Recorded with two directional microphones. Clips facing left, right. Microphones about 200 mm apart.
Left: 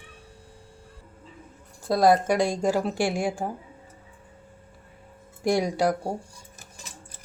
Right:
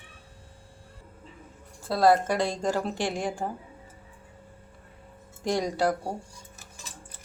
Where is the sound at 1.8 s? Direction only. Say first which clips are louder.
Left 2 dB; 15° left (ahead or behind).